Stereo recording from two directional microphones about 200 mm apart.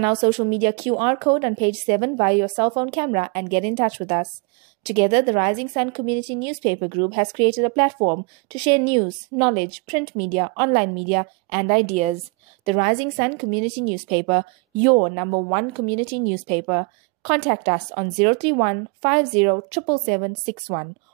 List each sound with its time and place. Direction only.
0.0 s a woman's voice: 30° right (ahead or behind)
6.6 s a woman's voice: 40° right (ahead or behind)
7.0 s a woman's voice: 25° right (ahead or behind)